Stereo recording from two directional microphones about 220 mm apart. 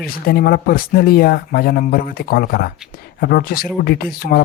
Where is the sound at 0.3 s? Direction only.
45° left (ahead or behind).